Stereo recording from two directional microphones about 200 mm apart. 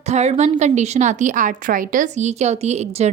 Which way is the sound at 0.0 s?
35° right (ahead or behind).